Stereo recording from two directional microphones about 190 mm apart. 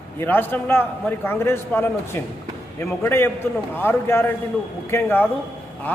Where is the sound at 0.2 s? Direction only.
10° left (ahead or behind).